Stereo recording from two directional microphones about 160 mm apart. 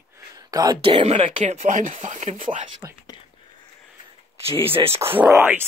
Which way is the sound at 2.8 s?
20° right (ahead or behind).